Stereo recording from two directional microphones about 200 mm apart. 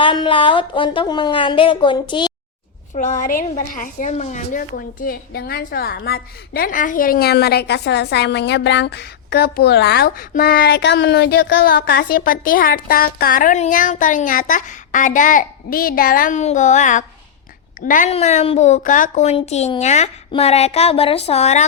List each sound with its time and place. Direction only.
0.0 s speech: 25° left (ahead or behind)
2.9 s a woman's voice: 40° left (ahead or behind)